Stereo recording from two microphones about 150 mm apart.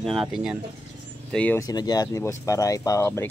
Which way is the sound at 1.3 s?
10° left (ahead or behind).